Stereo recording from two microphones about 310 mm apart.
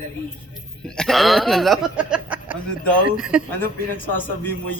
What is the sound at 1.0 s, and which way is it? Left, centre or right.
Speech, centre.